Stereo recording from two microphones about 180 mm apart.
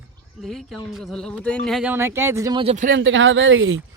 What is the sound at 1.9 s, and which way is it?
Speech, 15° right (ahead or behind).